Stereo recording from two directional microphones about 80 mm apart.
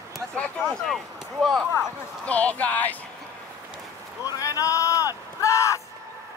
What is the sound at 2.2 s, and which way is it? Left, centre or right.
Speech, centre.